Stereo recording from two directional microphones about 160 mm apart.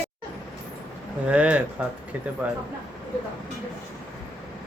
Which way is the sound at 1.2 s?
10° right (ahead or behind).